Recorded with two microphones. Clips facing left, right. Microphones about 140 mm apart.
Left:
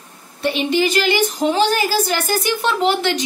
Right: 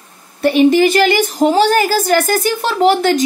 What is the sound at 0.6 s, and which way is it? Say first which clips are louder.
Speech: right 9 dB; 45° right (ahead or behind).